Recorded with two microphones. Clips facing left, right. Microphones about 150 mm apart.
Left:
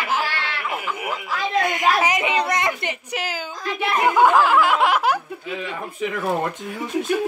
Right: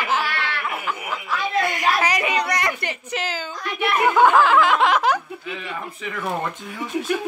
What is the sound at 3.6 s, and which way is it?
Speech, 35° left (ahead or behind).